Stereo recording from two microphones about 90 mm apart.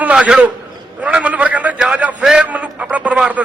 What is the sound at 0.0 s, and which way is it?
A man's voice, 10° right (ahead or behind).